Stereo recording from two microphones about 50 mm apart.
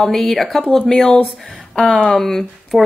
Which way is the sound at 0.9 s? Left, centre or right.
Centre.